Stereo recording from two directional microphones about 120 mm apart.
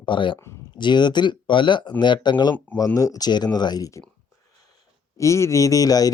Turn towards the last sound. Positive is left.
turn(degrees=30)  # may be behind; listen again after turning